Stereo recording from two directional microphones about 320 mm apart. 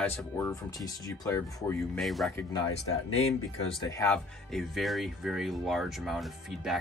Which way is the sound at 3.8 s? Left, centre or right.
Centre.